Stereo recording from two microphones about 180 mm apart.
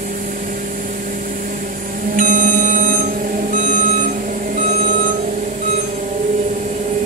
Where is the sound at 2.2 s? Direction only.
50° right (ahead or behind).